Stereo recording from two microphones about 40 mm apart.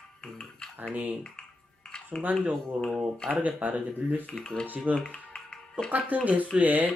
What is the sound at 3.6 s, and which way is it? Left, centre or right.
Speech, right.